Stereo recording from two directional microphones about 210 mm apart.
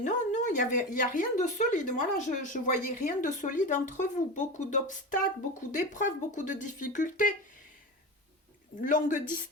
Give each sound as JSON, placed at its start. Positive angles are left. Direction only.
{"t": 0.0, "sound": "speech", "side_deg": 35}
{"t": 8.8, "sound": "speech", "side_deg": 40}